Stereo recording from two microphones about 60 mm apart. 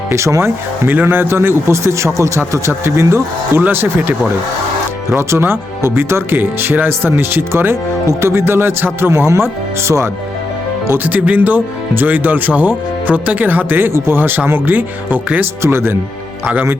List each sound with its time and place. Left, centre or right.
0.1 s speech: right
0.9 s speech: right
3.6 s speech: right
5.1 s speech: right
11.0 s speech: right